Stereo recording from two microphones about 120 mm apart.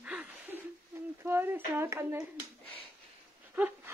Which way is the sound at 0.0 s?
10° right (ahead or behind).